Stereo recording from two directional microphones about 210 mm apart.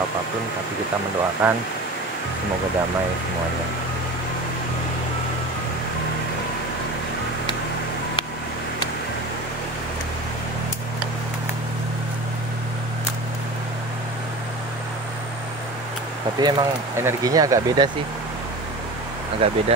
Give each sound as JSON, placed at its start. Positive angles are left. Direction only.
{"t": 1.4, "sound": "speech", "side_deg": -5}
{"t": 16.3, "sound": "speech", "side_deg": -20}
{"t": 19.4, "sound": "speech", "side_deg": -25}